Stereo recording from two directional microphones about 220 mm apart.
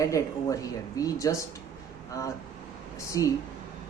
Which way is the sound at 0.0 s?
15° left (ahead or behind).